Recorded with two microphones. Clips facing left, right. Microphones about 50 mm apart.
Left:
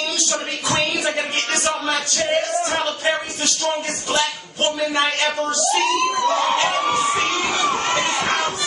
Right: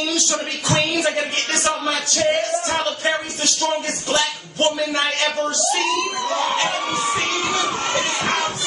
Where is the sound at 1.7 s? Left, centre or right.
Centre.